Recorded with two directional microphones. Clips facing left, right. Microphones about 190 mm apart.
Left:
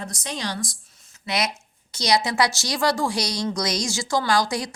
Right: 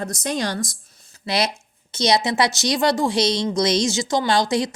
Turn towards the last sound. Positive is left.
turn(degrees=-25)  # may be behind; listen again after turning